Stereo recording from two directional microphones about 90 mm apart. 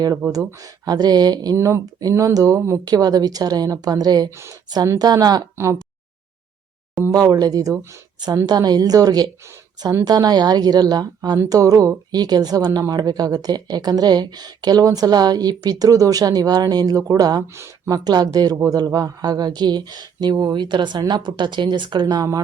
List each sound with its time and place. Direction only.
0.3 s speech: 40° right (ahead or behind)
1.5 s speech: 35° right (ahead or behind)
2.8 s speech: 45° right (ahead or behind)
7.1 s speech: 45° right (ahead or behind)
22.0 s speech: 40° right (ahead or behind)